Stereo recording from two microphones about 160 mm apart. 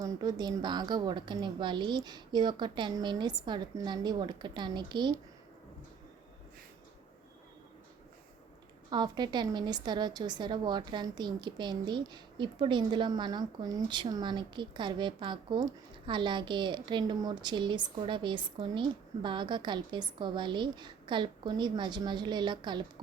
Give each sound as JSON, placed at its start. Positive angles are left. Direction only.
{"t": 0.0, "sound": "a woman's voice", "side_deg": -25}
{"t": 8.9, "sound": "a woman's voice", "side_deg": -25}